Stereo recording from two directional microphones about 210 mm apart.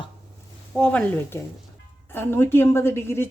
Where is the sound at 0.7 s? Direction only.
5° left (ahead or behind).